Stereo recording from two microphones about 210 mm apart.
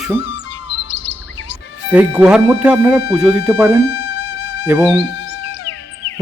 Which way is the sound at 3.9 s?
90° left.